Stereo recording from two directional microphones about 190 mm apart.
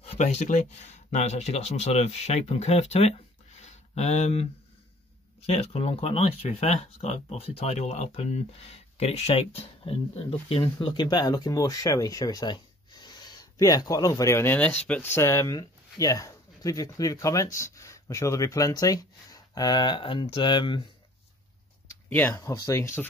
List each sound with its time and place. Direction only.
0.0 s speech: 35° left (ahead or behind)
5.5 s speech: 30° left (ahead or behind)
21.8 s speech: 10° left (ahead or behind)